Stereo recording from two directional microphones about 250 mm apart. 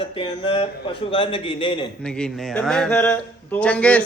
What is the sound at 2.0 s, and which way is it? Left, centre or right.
Speech, centre.